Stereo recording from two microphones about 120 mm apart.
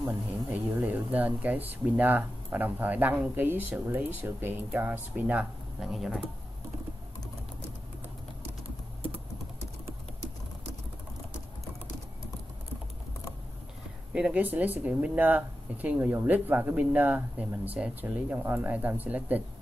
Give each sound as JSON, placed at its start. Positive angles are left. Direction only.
{"t": 0.5, "sound": "speech", "side_deg": -10}
{"t": 9.0, "sound": "typing", "side_deg": -55}
{"t": 14.1, "sound": "speech", "side_deg": -10}